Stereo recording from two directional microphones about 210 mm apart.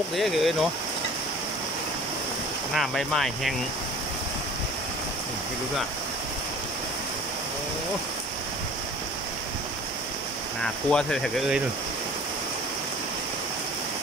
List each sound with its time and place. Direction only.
0.1 s speech: centre (ahead or behind)
2.7 s speech: centre (ahead or behind)
10.9 s speech: 5° left (ahead or behind)